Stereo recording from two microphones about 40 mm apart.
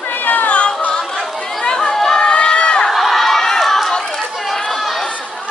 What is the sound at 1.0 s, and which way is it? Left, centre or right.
Chatter, centre.